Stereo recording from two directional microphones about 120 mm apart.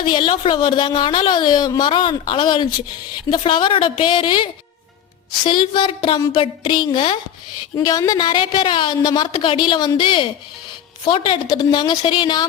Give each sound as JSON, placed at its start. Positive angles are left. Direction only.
{"t": 0.0, "sound": "a woman's voice", "side_deg": 45}
{"t": 5.5, "sound": "a woman's voice", "side_deg": 45}
{"t": 7.8, "sound": "a woman's voice", "side_deg": 30}